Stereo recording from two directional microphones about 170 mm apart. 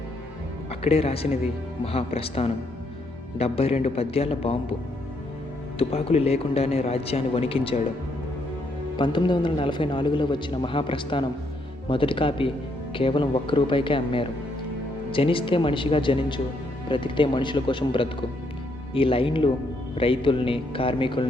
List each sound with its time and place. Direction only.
0.7 s a man's voice: 35° left (ahead or behind)
5.8 s a man's voice: 35° left (ahead or behind)
9.0 s a man's voice: 25° left (ahead or behind)